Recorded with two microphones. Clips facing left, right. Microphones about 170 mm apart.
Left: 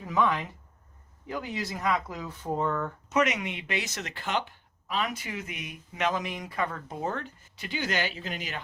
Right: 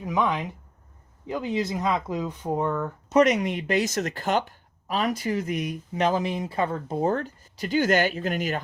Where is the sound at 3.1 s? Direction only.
35° right (ahead or behind).